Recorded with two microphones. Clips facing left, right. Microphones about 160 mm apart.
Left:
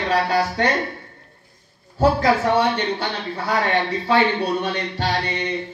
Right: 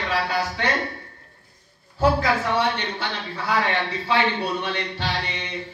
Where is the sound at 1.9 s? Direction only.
45° left (ahead or behind).